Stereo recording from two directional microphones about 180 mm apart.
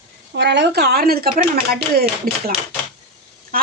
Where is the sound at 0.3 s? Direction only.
70° right (ahead or behind).